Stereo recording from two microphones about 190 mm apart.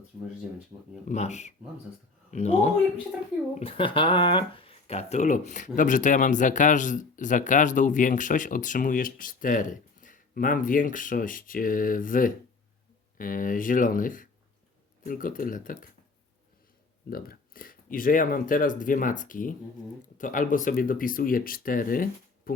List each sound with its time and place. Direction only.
0.7 s speech: 20° right (ahead or behind)
1.0 s speech: 35° left (ahead or behind)
17.1 s speech: 50° left (ahead or behind)